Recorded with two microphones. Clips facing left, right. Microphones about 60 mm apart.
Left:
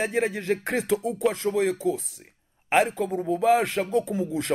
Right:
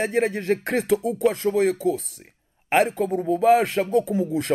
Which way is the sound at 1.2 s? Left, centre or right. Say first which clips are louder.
Right 3 dB; centre.